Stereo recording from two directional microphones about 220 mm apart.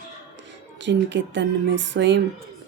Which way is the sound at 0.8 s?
55° right (ahead or behind).